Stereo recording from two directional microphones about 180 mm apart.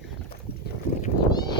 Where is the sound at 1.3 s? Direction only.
20° left (ahead or behind).